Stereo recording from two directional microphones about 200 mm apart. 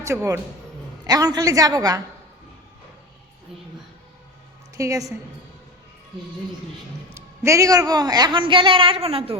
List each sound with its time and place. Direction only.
0.0 s a woman's voice: 15° right (ahead or behind)
4.7 s a woman's voice: 15° right (ahead or behind)
7.1 s a man's voice: 15° right (ahead or behind)